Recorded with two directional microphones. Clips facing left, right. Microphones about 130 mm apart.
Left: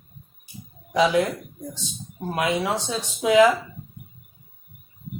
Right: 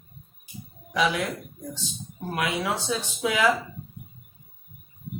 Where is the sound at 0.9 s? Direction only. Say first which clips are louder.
Left 6 dB; 25° left (ahead or behind).